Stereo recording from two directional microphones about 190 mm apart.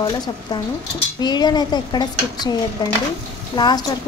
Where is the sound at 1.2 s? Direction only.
20° left (ahead or behind).